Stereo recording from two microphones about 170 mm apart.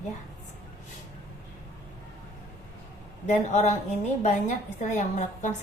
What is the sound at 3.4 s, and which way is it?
A woman's voice, 45° left (ahead or behind).